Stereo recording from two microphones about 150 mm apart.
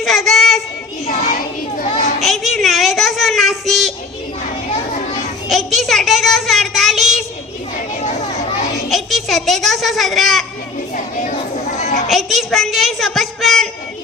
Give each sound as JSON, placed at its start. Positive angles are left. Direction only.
{"t": 0.0, "sound": "child singing", "side_deg": 0}
{"t": 1.2, "sound": "children playing", "side_deg": 65}
{"t": 2.2, "sound": "child singing", "side_deg": 0}
{"t": 5.5, "sound": "child singing", "side_deg": 0}
{"t": 8.9, "sound": "a child's voice", "side_deg": 0}
{"t": 12.0, "sound": "a woman's voice", "side_deg": 0}